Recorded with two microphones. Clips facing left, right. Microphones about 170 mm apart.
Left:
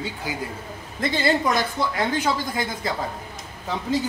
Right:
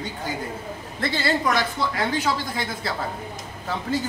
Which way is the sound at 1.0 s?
20° left (ahead or behind).